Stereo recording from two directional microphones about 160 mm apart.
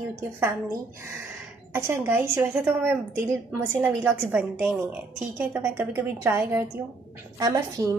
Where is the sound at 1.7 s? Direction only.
15° right (ahead or behind).